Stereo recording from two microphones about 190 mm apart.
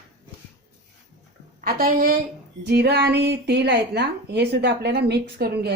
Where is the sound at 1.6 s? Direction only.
50° right (ahead or behind).